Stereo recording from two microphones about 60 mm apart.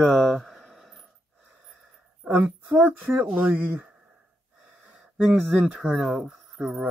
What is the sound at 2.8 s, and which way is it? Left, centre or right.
Speech, right.